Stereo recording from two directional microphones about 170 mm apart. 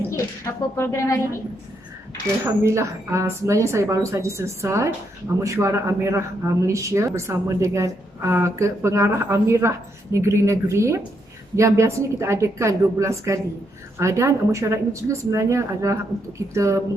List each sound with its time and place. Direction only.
0.8 s a woman's voice: 15° left (ahead or behind)
2.4 s speech: 15° right (ahead or behind)